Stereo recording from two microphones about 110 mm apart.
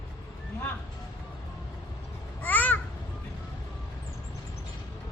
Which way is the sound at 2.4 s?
15° left (ahead or behind).